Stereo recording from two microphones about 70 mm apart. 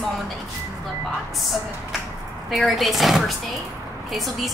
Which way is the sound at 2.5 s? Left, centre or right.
Centre.